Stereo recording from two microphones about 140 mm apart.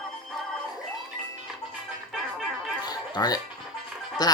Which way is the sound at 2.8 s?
30° left (ahead or behind).